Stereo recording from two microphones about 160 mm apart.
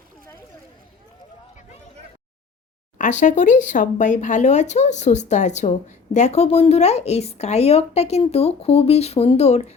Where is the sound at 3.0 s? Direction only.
50° left (ahead or behind).